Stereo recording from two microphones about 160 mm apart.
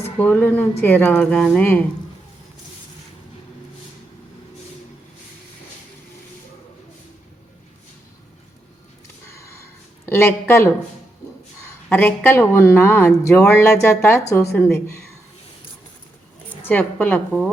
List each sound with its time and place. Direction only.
0.2 s a woman's voice: 10° left (ahead or behind)
9.3 s sniff: 15° left (ahead or behind)
10.1 s a woman's voice: 15° left (ahead or behind)
11.9 s a woman's voice: 10° left (ahead or behind)
16.6 s a woman's voice: 10° left (ahead or behind)